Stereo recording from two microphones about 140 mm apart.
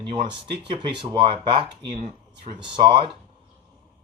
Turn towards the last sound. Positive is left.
turn(degrees=-35)  # may be behind; listen again after turning